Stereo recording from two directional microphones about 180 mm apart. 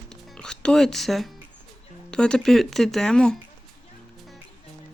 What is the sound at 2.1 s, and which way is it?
Speech, 5° left (ahead or behind).